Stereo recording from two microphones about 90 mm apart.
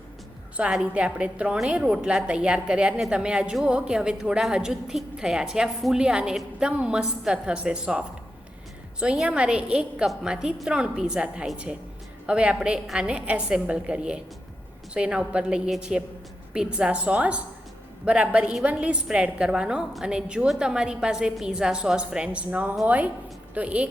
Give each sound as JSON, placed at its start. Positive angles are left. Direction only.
{"t": 0.5, "sound": "a woman's voice", "side_deg": -10}